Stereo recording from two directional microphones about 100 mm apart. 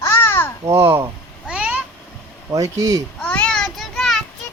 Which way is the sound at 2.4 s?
35° right (ahead or behind).